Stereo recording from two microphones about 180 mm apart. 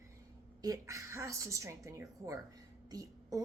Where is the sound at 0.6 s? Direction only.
20° right (ahead or behind).